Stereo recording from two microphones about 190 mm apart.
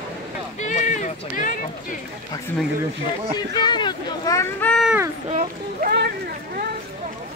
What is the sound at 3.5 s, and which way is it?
Speech, 25° left (ahead or behind).